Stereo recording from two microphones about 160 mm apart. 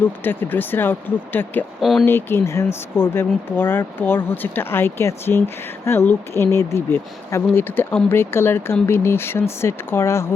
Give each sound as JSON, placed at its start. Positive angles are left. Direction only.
{"t": 0.3, "sound": "speech", "side_deg": 10}
{"t": 1.8, "sound": "speech", "side_deg": 0}
{"t": 2.0, "sound": "speech", "side_deg": 15}